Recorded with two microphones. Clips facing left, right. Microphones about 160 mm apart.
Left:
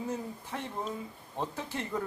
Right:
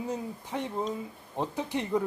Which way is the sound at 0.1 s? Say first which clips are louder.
Right 3 dB; 15° right (ahead or behind).